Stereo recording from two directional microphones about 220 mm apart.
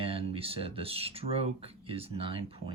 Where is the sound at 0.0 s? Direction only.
25° right (ahead or behind).